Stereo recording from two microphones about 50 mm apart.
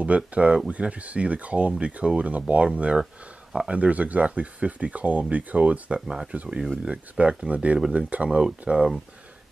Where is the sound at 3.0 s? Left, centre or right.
Centre.